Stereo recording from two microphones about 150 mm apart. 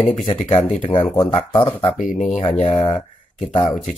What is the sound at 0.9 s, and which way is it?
Mantra, 20° left (ahead or behind).